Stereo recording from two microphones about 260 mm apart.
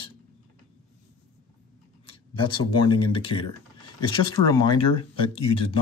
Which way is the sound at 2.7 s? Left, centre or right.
Left.